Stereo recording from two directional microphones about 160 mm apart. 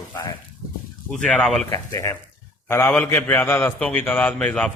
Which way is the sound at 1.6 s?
20° left (ahead or behind).